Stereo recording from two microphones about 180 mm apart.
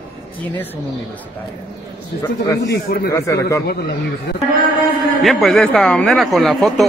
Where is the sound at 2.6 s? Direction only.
65° left (ahead or behind).